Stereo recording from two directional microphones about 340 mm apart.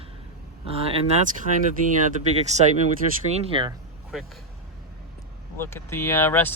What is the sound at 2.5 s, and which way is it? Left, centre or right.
Speech, centre.